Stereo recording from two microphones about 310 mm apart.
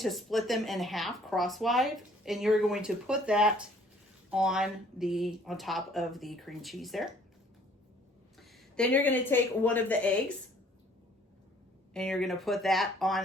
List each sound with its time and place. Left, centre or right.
0.0 s speech: centre
8.4 s a woman's voice: centre
11.9 s speech: centre